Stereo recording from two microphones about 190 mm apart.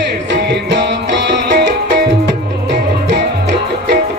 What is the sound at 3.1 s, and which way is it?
Music, 65° right (ahead or behind).